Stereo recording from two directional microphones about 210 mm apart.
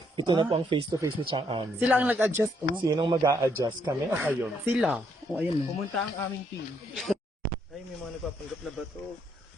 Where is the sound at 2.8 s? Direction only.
20° right (ahead or behind); by 5.4 s 5° right (ahead or behind).